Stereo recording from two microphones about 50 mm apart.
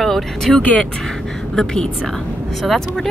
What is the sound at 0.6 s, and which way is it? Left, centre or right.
Speech, left.